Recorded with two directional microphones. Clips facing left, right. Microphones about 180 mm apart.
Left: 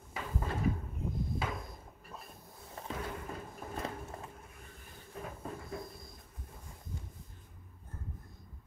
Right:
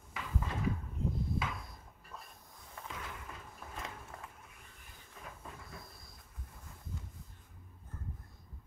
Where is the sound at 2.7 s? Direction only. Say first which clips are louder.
Left 6 dB; 35° left (ahead or behind).